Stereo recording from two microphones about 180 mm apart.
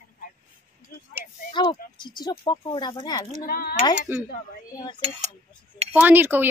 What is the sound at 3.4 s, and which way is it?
Speech, 55° left (ahead or behind).